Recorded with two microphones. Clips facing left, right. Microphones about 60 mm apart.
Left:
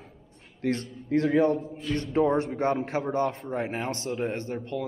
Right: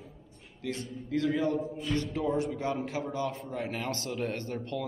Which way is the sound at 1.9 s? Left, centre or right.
Left.